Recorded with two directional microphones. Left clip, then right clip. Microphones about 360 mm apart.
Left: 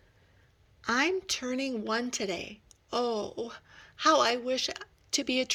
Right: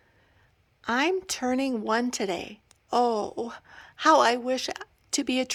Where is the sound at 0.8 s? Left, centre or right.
Centre.